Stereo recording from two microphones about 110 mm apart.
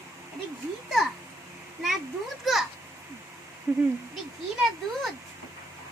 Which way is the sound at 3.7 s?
20° right (ahead or behind).